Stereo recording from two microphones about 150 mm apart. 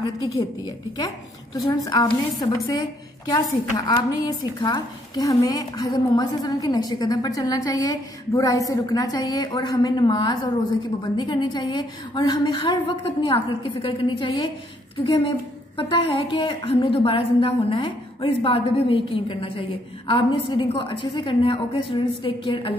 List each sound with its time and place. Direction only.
0.0 s a woman's voice: 25° left (ahead or behind)